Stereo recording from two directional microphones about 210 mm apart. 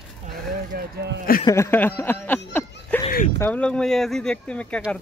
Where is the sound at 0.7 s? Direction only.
50° right (ahead or behind).